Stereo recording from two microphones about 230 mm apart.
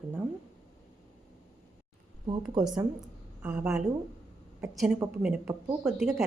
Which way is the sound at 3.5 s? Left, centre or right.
Centre.